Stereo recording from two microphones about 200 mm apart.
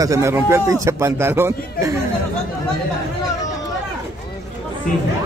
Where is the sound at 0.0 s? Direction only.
15° right (ahead or behind).